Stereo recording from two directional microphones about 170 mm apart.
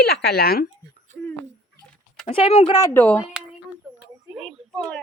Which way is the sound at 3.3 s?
10° right (ahead or behind).